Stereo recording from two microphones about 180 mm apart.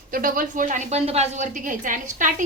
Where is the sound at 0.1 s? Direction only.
50° right (ahead or behind).